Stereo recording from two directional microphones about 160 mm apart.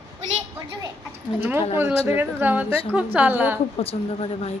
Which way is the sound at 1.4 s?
10° right (ahead or behind).